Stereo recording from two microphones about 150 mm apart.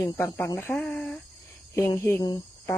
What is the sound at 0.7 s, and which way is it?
Speech, 5° left (ahead or behind).